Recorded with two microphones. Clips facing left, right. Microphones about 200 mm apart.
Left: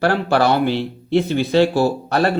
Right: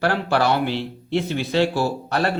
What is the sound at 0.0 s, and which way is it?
A man's voice, 40° left (ahead or behind).